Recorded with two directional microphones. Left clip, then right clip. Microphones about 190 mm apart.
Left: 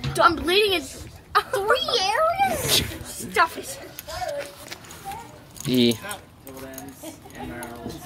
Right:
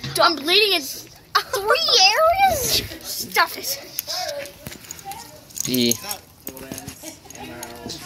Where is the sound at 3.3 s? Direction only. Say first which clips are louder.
Right 1 dB; 5° left (ahead or behind).